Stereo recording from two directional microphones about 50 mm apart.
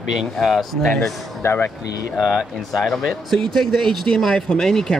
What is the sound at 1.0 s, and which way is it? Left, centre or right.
Speech, left.